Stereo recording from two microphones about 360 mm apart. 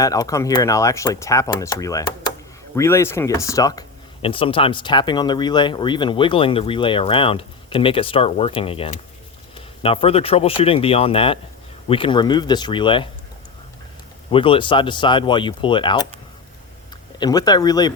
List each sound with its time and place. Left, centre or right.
0.0 s speech: centre
14.3 s speech: centre
17.2 s speech: centre